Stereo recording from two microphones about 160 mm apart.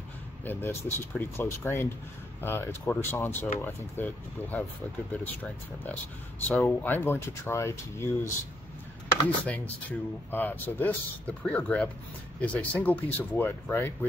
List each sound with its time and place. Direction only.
0.5 s a man's voice: 15° left (ahead or behind)
9.5 s a man's voice: 10° left (ahead or behind)